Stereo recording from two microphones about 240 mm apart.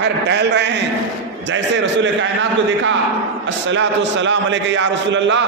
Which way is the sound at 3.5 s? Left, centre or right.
Right.